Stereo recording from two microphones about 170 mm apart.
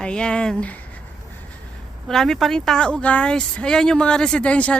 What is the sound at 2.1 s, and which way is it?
Speech, centre (ahead or behind).